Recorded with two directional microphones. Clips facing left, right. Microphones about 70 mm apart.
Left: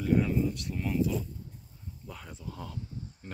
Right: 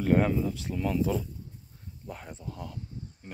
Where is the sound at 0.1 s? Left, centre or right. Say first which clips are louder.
Right 2 dB; right.